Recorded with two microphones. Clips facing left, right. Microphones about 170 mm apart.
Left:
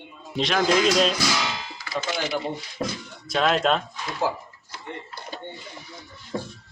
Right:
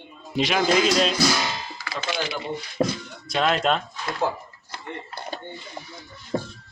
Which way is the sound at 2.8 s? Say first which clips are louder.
Right 6 dB; 60° right (ahead or behind).